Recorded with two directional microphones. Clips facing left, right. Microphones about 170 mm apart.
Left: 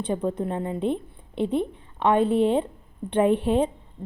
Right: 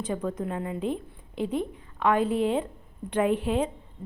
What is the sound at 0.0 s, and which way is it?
A woman's voice, 30° left (ahead or behind).